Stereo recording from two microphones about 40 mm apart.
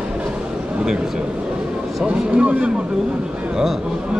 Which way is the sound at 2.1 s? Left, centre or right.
Right.